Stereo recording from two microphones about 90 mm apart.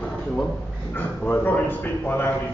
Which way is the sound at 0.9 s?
20° left (ahead or behind).